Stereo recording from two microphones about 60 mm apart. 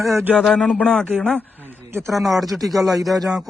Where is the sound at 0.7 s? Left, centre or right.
Left.